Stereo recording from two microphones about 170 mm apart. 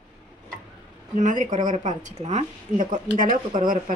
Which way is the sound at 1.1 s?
50° right (ahead or behind).